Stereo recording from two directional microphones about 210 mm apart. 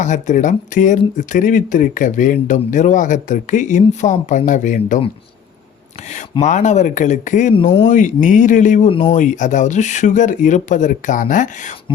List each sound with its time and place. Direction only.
0.0 s speech: 35° left (ahead or behind)
6.4 s speech: 35° left (ahead or behind)
7.6 s speech: 20° left (ahead or behind)
7.9 s speech: 35° left (ahead or behind)